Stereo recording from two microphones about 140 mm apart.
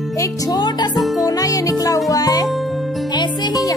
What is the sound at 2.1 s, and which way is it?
Speech, 25° left (ahead or behind).